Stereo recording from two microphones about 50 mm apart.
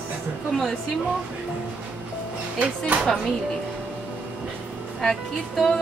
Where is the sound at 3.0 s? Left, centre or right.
Centre.